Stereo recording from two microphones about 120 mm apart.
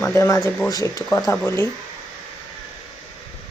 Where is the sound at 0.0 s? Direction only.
20° left (ahead or behind).